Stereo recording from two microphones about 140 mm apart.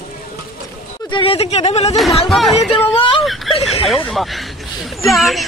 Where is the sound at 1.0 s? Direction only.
40° left (ahead or behind).